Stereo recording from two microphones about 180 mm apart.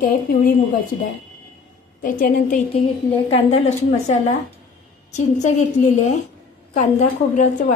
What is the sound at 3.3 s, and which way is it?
A woman's voice, 40° left (ahead or behind).